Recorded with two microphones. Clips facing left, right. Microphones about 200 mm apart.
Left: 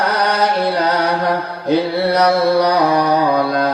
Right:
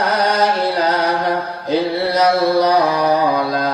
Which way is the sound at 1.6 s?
60° left (ahead or behind).